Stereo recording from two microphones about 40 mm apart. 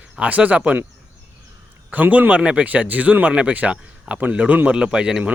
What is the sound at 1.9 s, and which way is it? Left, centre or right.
Speech, right.